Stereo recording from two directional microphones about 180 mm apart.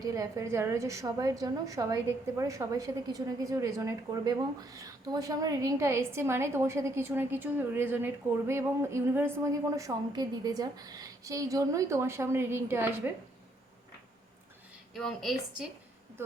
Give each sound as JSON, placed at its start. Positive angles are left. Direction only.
{"t": 0.0, "sound": "a woman's voice", "side_deg": -20}
{"t": 14.9, "sound": "speech", "side_deg": 0}